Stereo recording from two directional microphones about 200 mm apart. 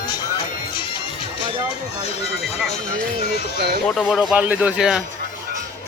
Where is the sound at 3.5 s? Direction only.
55° right (ahead or behind).